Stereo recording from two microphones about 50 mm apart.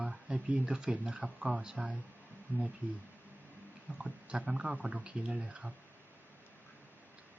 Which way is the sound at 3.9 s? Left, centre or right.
Centre.